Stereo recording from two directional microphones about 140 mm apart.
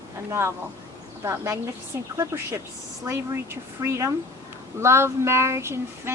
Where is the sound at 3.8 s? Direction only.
20° right (ahead or behind).